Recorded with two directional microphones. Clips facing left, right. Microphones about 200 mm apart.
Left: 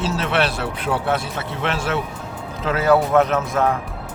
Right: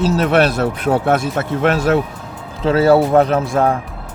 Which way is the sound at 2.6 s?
30° right (ahead or behind).